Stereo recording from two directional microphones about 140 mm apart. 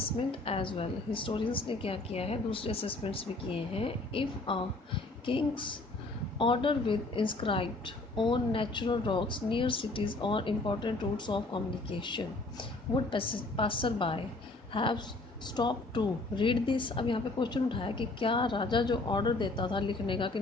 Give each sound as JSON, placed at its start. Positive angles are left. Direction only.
{"t": 0.0, "sound": "a woman's voice", "side_deg": 40}